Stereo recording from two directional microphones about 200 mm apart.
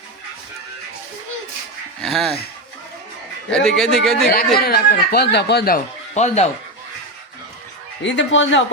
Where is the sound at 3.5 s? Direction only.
Centre (ahead or behind).